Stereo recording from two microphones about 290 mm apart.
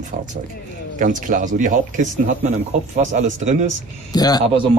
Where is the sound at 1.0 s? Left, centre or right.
Right.